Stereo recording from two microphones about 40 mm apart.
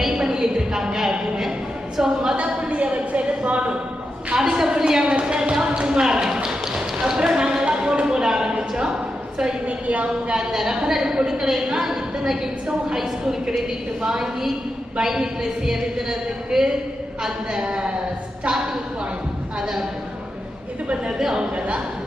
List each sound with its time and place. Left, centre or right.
0.0 s a sound: centre
2.0 s speech: centre
2.3 s a woman's voice: right
4.4 s a woman's voice: centre
5.0 s tap: right
9.6 s a woman's voice: right
10.3 s a woman's voice: centre
17.6 s speech: right
18.4 s a woman's voice: centre
21.3 s a woman's voice: right